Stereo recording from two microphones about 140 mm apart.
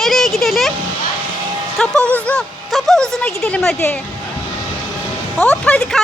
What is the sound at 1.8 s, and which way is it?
Speech, 10° left (ahead or behind).